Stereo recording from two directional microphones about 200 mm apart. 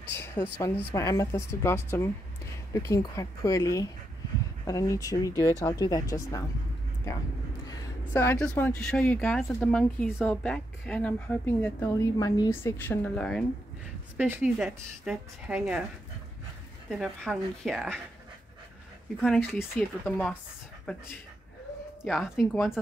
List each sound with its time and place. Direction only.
0.1 s a woman's voice: 10° left (ahead or behind)
7.7 s a woman's voice: 10° left (ahead or behind)
14.1 s speech: 10° right (ahead or behind)
17.0 s speech: centre (ahead or behind)
19.7 s speech: 35° right (ahead or behind)
20.1 s speech: 5° left (ahead or behind)
22.0 s speech: centre (ahead or behind)